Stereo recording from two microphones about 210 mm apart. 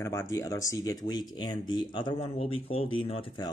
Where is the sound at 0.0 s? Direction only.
15° left (ahead or behind).